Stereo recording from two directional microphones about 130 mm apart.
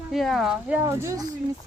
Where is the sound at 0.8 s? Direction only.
25° right (ahead or behind).